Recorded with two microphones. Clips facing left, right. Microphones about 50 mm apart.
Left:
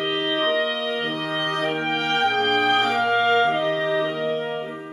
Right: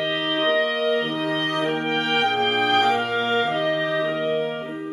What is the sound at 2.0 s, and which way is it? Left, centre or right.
Music, centre.